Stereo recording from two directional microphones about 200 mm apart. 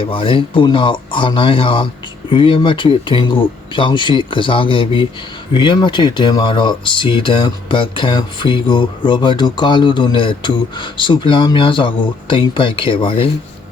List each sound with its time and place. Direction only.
0.0 s speech: 25° left (ahead or behind)